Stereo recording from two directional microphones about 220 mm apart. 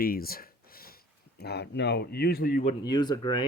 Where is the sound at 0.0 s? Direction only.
40° left (ahead or behind).